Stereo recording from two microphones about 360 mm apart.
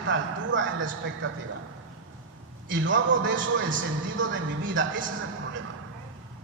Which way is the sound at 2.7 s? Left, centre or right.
Right.